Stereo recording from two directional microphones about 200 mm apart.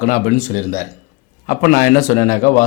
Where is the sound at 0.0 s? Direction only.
40° left (ahead or behind).